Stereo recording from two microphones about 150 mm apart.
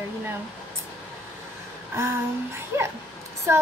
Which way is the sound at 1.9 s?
20° right (ahead or behind).